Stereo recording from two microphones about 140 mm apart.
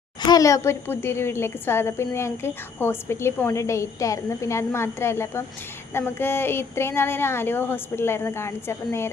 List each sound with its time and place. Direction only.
0.3 s a woman's voice: 25° left (ahead or behind)